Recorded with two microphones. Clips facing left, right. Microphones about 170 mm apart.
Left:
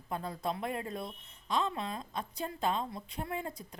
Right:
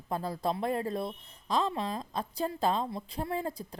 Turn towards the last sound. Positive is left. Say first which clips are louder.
# right 5 dB
turn(degrees=-35)  # may be behind; listen again after turning